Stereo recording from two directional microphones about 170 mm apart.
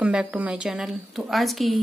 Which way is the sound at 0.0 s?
5° right (ahead or behind).